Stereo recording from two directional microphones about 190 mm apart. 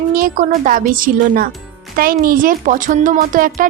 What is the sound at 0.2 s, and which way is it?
A woman's voice, 45° right (ahead or behind).